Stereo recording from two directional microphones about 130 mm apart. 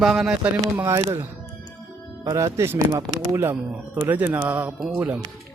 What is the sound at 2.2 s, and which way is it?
Speech, 25° right (ahead or behind).